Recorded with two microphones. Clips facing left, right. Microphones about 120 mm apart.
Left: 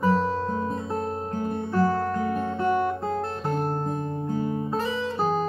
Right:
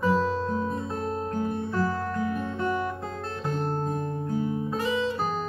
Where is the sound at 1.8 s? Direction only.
30° left (ahead or behind).